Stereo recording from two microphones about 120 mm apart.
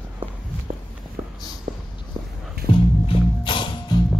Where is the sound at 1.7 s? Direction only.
90° right.